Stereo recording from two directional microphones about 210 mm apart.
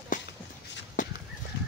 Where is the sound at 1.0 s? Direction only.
40° left (ahead or behind).